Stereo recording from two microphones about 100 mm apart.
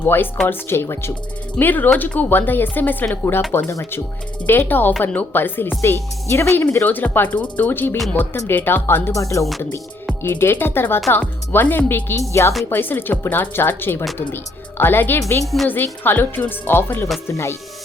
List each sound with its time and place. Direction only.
0.0 s speech: 20° left (ahead or behind)
9.1 s speech: 30° left (ahead or behind)
10.1 s music: 20° left (ahead or behind)
11.1 s speech: 20° left (ahead or behind)
15.7 s speech: 20° left (ahead or behind)